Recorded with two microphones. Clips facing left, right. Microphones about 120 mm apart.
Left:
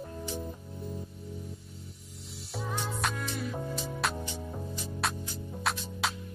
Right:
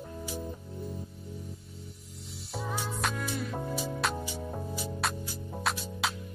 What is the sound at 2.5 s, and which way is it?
Music, centre (ahead or behind).